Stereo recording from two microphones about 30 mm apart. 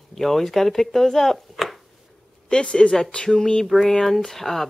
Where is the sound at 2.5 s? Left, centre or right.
Left.